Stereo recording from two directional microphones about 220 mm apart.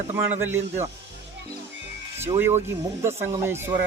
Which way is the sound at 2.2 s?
10° right (ahead or behind).